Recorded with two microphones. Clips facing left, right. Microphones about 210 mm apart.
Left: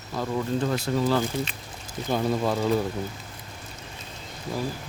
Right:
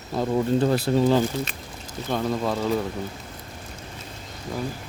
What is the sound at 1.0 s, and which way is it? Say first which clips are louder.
Speech: right 4 dB; 20° right (ahead or behind).